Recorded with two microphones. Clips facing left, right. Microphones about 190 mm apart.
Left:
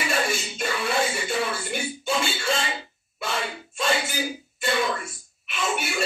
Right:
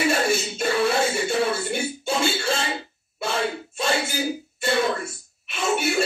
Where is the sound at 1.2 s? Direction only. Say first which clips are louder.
Right 4 dB; 30° right (ahead or behind).